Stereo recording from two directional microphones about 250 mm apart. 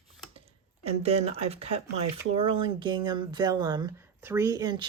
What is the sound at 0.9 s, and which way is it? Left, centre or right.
A woman's voice, right.